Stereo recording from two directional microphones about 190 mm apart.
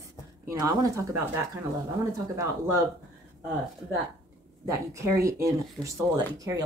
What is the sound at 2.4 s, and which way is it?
Speech, 15° right (ahead or behind).